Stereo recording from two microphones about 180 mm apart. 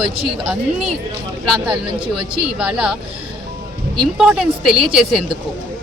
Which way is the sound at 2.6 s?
5° right (ahead or behind).